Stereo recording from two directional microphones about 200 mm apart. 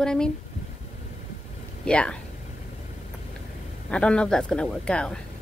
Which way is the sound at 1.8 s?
5° left (ahead or behind).